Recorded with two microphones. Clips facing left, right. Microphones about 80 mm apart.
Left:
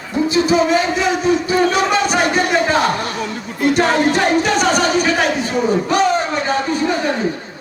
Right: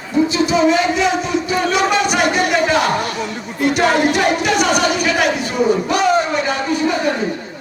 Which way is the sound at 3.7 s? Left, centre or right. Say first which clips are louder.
Even; left.